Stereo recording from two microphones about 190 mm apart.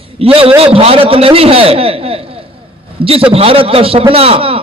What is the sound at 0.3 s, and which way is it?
A man's voice, 30° right (ahead or behind).